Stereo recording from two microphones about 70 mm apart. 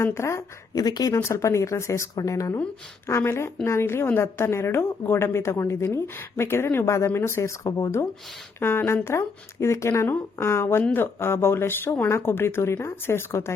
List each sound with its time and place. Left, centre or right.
0.0 s a woman's voice: left
0.7 s speech: left
1.1 s a woman's voice: left
8.5 s a woman's voice: left